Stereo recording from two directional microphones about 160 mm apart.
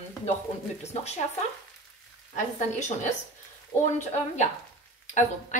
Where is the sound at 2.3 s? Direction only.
50° left (ahead or behind).